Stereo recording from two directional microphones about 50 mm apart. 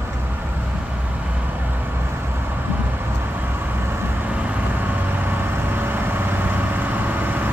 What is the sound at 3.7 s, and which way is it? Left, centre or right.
Vehicle, right.